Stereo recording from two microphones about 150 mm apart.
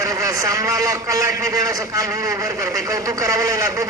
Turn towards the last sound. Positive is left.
turn(degrees=-20)  # may be behind; listen again after turning